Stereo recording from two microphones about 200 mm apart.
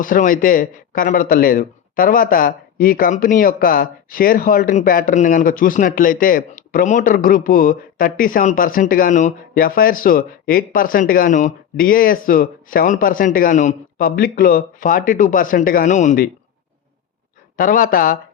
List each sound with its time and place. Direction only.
0.0 s speech: 40° left (ahead or behind)
17.6 s speech: 45° left (ahead or behind)